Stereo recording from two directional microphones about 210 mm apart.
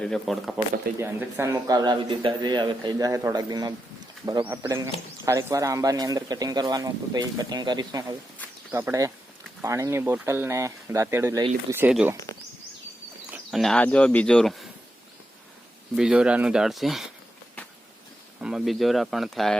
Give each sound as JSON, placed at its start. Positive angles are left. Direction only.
{"t": 0.0, "sound": "speech", "side_deg": 0}
{"t": 0.9, "sound": "speech", "side_deg": -10}
{"t": 13.3, "sound": "speech", "side_deg": 0}
{"t": 16.0, "sound": "speech", "side_deg": -5}
{"t": 18.3, "sound": "speech", "side_deg": -5}